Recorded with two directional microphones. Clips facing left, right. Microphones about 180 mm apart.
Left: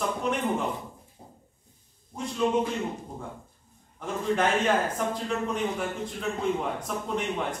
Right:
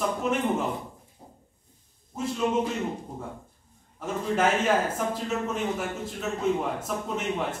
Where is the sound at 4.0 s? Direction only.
5° right (ahead or behind).